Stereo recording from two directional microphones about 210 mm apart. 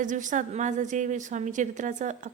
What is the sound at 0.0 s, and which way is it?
A woman's voice, 35° right (ahead or behind).